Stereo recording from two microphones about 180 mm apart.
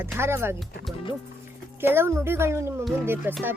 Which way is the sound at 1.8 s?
15° right (ahead or behind).